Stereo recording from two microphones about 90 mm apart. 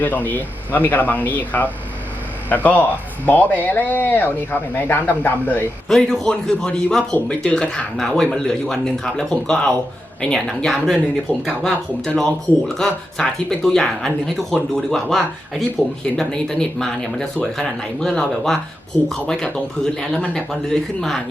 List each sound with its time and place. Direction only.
0.0 s speech: 20° left (ahead or behind)
3.2 s speech: 20° left (ahead or behind)
5.9 s speech: 5° left (ahead or behind)